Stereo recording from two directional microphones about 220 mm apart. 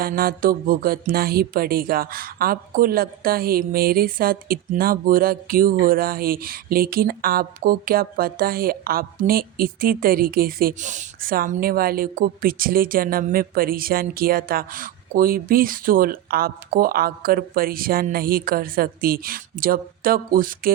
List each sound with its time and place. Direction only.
0.0 s music: 40° right (ahead or behind)